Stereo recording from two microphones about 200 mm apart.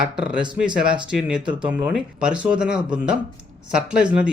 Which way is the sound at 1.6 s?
5° right (ahead or behind).